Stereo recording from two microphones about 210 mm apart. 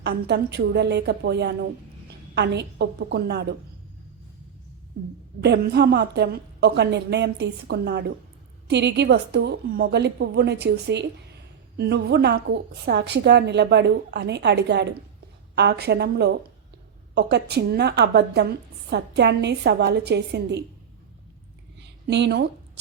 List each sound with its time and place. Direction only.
0.0 s a woman's voice: 50° right (ahead or behind)
5.4 s a woman's voice: 50° right (ahead or behind)
21.8 s a sound: 55° right (ahead or behind)